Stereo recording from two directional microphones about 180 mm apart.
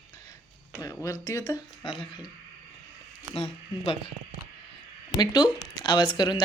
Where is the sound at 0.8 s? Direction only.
20° left (ahead or behind).